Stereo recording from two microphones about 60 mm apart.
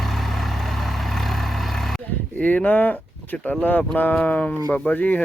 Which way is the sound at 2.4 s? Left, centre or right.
Left.